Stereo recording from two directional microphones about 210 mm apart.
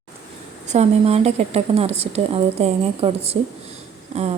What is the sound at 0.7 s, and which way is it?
A woman's voice, 30° right (ahead or behind).